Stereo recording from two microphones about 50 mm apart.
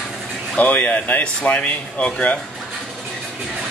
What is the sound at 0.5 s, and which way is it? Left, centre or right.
Speech, left.